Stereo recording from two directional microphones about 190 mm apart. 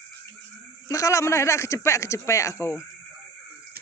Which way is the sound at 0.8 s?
15° left (ahead or behind).